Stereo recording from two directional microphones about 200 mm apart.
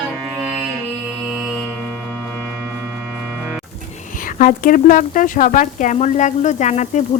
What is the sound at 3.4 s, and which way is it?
Music, centre (ahead or behind).